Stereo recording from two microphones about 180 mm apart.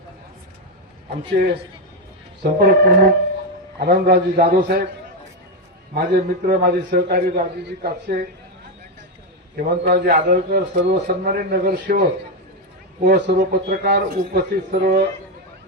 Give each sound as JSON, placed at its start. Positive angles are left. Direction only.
{"t": 2.4, "sound": "a man's voice", "side_deg": -55}
{"t": 5.9, "sound": "a man's voice", "side_deg": -55}
{"t": 9.6, "sound": "a man's voice", "side_deg": -55}
{"t": 10.8, "sound": "a man's voice", "side_deg": -65}